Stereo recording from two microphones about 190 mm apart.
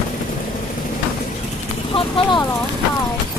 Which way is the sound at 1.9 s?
25° left (ahead or behind).